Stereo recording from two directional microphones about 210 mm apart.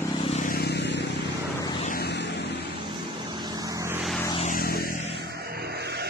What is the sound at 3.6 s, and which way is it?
Vehicle, 15° right (ahead or behind).